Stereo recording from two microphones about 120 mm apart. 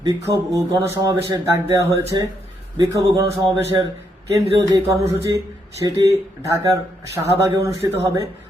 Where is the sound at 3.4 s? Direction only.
50° right (ahead or behind).